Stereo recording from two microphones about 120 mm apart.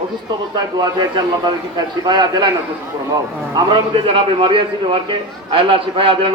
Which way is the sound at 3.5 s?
45° right (ahead or behind).